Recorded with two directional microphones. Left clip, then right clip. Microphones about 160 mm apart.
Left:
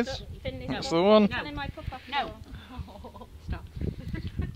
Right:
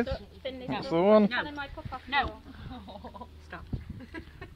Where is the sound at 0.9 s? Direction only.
20° left (ahead or behind).